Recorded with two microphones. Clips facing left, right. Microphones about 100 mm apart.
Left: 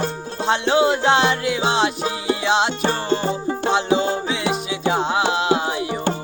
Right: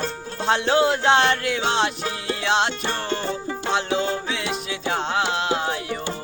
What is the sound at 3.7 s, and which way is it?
Music, 5° left (ahead or behind).